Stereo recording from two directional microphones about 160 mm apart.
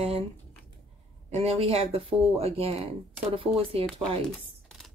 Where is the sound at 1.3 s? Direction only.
40° right (ahead or behind).